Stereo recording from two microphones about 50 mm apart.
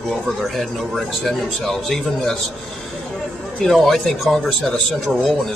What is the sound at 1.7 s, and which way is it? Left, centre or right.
Speech, centre.